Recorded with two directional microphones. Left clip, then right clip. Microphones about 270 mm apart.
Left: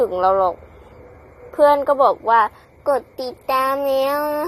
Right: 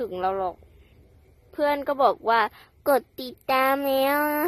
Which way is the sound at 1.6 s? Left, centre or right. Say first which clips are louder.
Left 9 dB; right.